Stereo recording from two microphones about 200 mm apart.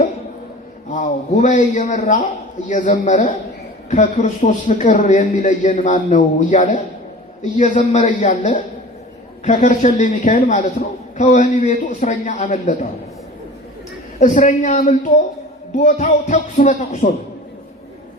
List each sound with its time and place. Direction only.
0.9 s a man's voice: 40° left (ahead or behind)
14.2 s a man's voice: 40° left (ahead or behind)